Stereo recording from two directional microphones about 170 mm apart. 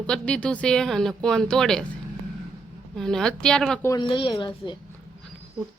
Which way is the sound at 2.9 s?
Centre (ahead or behind).